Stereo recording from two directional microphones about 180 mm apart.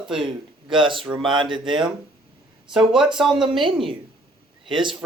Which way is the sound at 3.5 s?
30° right (ahead or behind).